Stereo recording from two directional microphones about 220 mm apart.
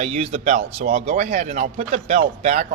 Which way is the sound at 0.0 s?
30° right (ahead or behind).